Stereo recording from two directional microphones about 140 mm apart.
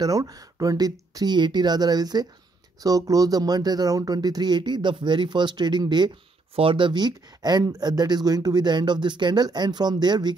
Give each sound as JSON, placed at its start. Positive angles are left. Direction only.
{"t": 0.0, "sound": "speech", "side_deg": -25}